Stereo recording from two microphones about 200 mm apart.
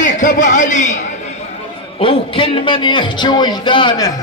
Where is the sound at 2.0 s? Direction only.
25° left (ahead or behind).